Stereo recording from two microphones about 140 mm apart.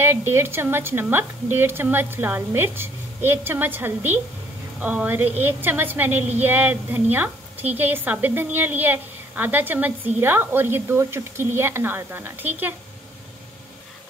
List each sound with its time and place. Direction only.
0.0 s a woman's voice: 15° right (ahead or behind)